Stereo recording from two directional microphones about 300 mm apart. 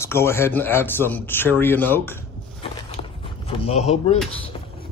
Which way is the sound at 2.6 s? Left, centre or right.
Centre.